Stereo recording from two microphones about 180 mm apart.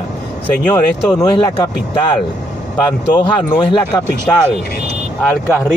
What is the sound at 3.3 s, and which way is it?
Speech, 25° left (ahead or behind).